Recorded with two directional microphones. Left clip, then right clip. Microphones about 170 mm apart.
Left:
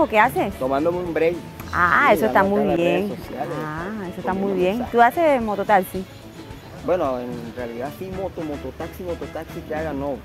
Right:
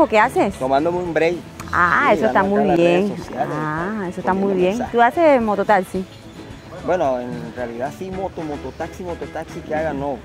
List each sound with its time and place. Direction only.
0.0 s speech: 15° right (ahead or behind)
0.7 s speech: 30° right (ahead or behind)
1.8 s speech: 5° right (ahead or behind)
2.5 s speech: 20° right (ahead or behind)
4.9 s speech: centre (ahead or behind)
5.2 s speech: 20° right (ahead or behind)
6.9 s speech: 25° right (ahead or behind)
9.7 s speech: 30° right (ahead or behind)